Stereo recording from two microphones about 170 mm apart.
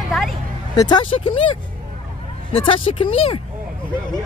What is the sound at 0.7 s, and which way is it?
Speech, 25° left (ahead or behind).